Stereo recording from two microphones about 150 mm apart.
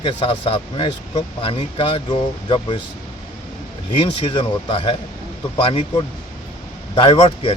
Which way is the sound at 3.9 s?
35° left (ahead or behind).